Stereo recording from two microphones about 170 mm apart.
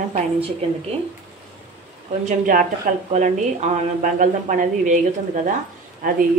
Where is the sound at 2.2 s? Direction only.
55° right (ahead or behind).